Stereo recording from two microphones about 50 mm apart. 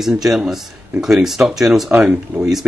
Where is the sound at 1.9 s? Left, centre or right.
Right.